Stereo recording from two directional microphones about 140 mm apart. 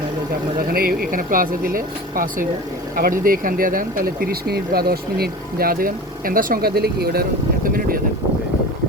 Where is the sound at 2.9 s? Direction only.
90° right.